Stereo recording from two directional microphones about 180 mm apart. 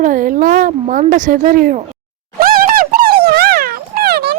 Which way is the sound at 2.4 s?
55° right (ahead or behind).